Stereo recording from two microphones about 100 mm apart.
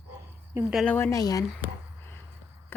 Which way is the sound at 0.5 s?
25° right (ahead or behind).